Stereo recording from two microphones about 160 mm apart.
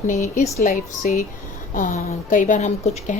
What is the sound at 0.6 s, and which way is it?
A woman's voice, 60° left (ahead or behind).